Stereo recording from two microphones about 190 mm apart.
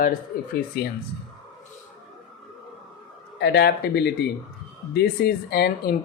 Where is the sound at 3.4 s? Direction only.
60° left (ahead or behind).